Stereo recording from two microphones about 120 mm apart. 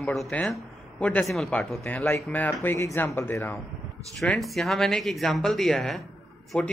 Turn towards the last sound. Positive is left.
turn(degrees=10)  # may be behind; listen again after turning